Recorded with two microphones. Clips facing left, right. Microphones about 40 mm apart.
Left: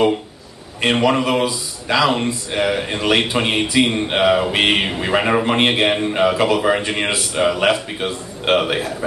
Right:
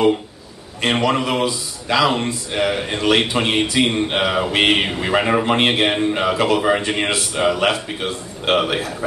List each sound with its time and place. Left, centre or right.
0.9 s a man's voice: centre
6.8 s a man's voice: centre